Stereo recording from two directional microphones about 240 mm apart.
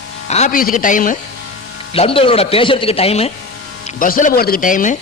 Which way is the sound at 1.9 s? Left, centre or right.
Left.